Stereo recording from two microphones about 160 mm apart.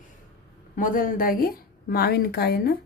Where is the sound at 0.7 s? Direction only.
60° left (ahead or behind); by 2.7 s 85° left.